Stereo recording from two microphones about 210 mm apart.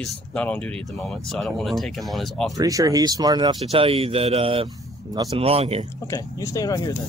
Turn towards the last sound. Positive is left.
turn(degrees=15)  # may be behind; listen again after turning